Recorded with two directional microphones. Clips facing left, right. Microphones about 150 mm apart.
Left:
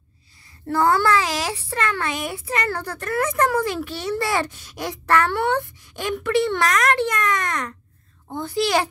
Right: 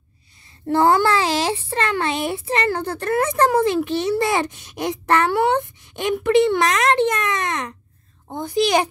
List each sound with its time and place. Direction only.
0.7 s a child's voice: 25° right (ahead or behind)